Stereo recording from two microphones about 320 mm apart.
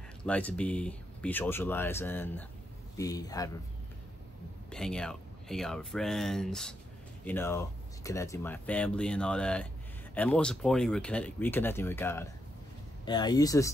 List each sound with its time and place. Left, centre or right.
0.2 s speech: centre
4.6 s speech: centre